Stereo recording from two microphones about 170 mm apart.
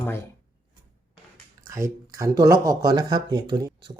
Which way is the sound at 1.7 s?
20° right (ahead or behind).